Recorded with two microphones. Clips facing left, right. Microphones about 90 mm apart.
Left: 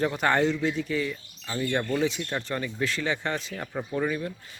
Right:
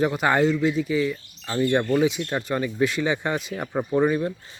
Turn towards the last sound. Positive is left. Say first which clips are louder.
# right 7 dB
turn(degrees=-30)  # may be behind; listen again after turning